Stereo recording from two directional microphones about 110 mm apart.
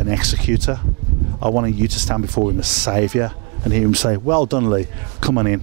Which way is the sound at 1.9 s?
10° right (ahead or behind).